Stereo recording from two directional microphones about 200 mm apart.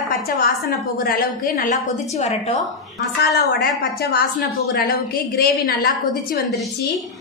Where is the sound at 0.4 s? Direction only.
45° left (ahead or behind).